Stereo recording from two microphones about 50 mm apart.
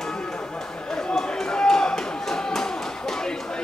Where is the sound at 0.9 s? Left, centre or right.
Centre.